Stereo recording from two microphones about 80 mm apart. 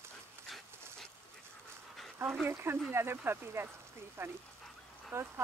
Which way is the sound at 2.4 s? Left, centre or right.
Right.